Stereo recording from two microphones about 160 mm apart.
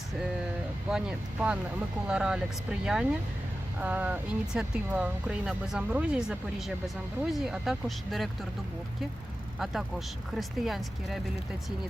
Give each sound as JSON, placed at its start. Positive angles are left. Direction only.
{"t": 0.9, "sound": "speech", "side_deg": -5}
{"t": 10.3, "sound": "speech", "side_deg": 0}